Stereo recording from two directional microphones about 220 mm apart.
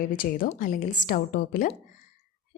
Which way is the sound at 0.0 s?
40° left (ahead or behind).